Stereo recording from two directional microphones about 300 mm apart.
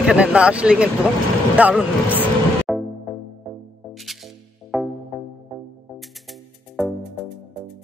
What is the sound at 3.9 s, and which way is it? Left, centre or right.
Music, centre.